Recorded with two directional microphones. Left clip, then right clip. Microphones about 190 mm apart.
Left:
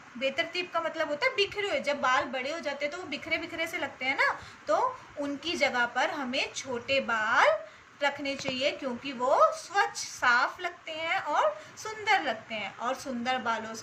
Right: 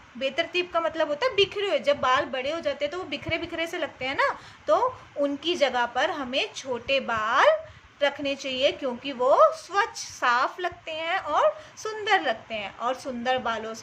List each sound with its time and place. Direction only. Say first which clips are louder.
0.2 s a woman's voice: right 4 dB; 50° right (ahead or behind)